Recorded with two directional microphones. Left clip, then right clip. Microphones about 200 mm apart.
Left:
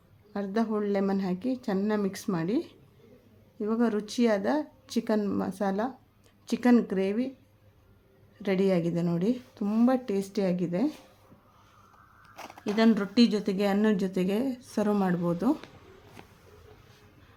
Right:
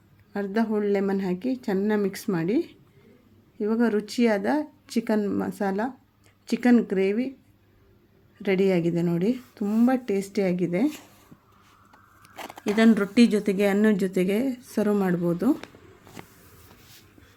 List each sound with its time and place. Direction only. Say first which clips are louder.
0.3 s speech: right 3 dB; 10° right (ahead or behind)
8.4 s speech: right 4 dB; 10° right (ahead or behind)
12.2 s a sound: right 5 dB; 45° right (ahead or behind)
12.7 s speech: right 4 dB; 15° right (ahead or behind)